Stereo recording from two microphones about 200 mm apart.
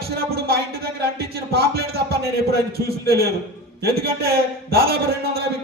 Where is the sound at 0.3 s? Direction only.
50° right (ahead or behind).